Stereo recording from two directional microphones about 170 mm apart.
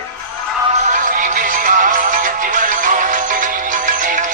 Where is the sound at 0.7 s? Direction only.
50° right (ahead or behind).